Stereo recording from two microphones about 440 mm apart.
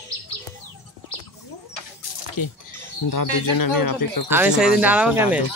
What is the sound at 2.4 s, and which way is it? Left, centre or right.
Speech, left.